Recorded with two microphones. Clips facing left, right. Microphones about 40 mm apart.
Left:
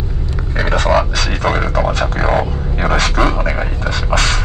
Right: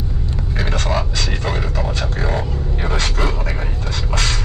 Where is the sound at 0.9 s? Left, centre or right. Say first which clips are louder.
Left 6 dB; left.